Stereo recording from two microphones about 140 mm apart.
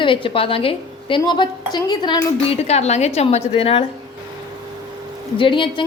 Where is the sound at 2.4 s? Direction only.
45° left (ahead or behind).